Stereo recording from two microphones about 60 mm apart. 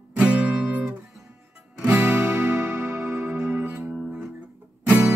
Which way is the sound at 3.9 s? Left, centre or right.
Centre.